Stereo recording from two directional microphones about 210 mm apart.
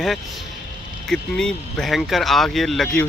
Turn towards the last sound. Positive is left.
turn(degrees=0)  # may be behind; listen again after turning